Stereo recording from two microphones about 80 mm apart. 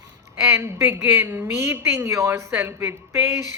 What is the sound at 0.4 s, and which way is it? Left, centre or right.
A woman's voice, right.